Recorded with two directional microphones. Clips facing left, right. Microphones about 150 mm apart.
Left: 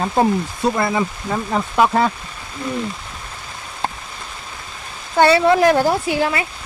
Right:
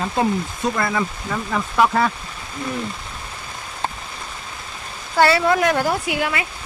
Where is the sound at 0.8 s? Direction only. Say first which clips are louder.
Left 3 dB; 25° left (ahead or behind).